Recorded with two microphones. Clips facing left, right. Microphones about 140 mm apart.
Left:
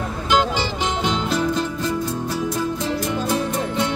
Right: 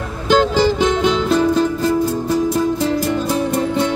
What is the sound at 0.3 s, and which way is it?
Music, 45° right (ahead or behind).